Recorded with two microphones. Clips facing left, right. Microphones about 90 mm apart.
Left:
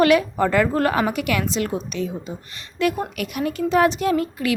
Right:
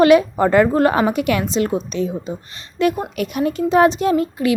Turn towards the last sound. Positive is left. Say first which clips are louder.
# right 4 dB
turn(degrees=-25)  # may be behind; listen again after turning